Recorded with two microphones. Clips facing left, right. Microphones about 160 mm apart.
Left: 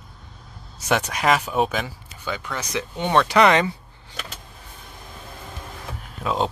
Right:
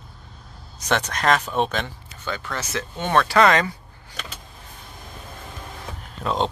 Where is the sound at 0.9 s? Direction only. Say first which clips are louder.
Left 1 dB; 10° left (ahead or behind).